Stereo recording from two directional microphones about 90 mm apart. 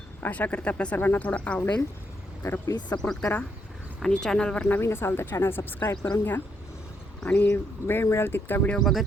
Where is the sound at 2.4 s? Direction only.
30° left (ahead or behind).